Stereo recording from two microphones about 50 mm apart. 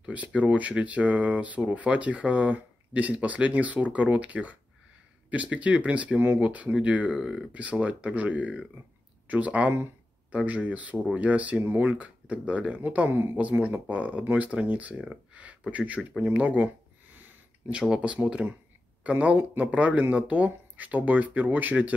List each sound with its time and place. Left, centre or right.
0.0 s speech: right
13.1 s speech: right
13.4 s speech: right
16.2 s a sound: right
17.6 s speech: centre; by 21.9 s right